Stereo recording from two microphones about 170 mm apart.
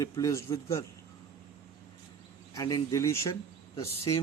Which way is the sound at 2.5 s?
20° left (ahead or behind).